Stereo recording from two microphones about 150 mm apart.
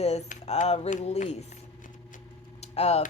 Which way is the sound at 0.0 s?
45° left (ahead or behind).